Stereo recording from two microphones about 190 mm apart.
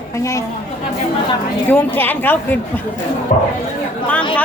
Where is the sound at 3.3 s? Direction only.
45° left (ahead or behind).